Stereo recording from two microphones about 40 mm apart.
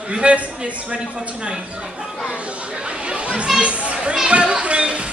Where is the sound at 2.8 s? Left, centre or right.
Right.